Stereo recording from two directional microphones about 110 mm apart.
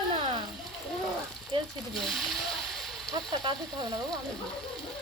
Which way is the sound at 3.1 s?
40° right (ahead or behind).